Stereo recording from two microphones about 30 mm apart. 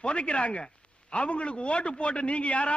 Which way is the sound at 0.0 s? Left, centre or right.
Left.